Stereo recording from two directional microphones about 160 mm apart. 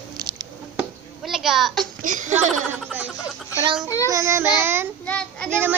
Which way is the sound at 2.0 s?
55° right (ahead or behind).